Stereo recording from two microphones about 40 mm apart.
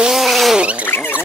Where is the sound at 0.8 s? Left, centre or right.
Left.